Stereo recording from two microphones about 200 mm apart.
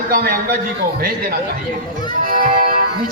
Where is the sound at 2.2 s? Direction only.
45° right (ahead or behind).